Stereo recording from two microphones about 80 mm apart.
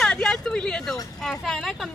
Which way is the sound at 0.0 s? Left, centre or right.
Centre.